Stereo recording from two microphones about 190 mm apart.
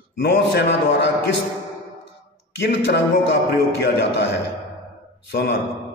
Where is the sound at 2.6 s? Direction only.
60° left (ahead or behind).